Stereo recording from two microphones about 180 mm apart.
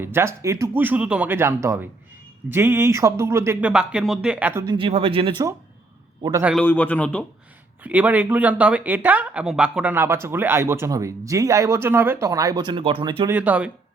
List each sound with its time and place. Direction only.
0.0 s speech: 15° right (ahead or behind)
4.6 s speech: 25° right (ahead or behind)
6.6 s a man's voice: 10° left (ahead or behind)
7.9 s speech: 10° right (ahead or behind); by 13.3 s 25° right (ahead or behind)
13.3 s speech: 10° right (ahead or behind)